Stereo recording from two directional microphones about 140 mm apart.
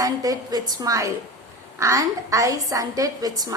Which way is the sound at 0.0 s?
25° right (ahead or behind).